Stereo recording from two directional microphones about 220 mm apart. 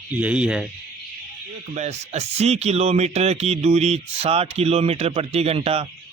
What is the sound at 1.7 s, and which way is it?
A man's voice, 30° right (ahead or behind).